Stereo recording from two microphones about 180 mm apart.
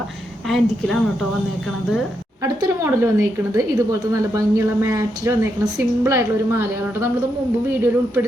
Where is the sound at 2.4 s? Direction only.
15° right (ahead or behind).